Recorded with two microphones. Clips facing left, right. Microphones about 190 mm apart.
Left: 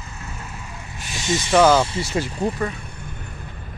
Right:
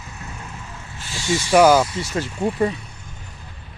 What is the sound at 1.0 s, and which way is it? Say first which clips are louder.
Vehicle: right 1 dB; 20° left (ahead or behind).